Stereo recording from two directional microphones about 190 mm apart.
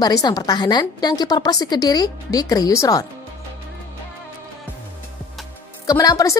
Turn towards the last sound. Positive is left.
turn(degrees=20)  # may be behind; listen again after turning